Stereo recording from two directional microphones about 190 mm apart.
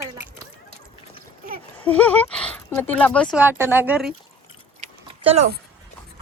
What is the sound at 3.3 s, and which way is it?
Speech, 10° right (ahead or behind).